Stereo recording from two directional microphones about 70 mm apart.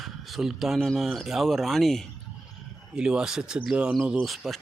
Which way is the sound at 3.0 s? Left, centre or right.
Centre.